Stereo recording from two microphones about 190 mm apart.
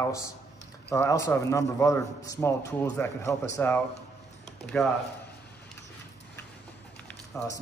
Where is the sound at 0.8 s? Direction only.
15° left (ahead or behind).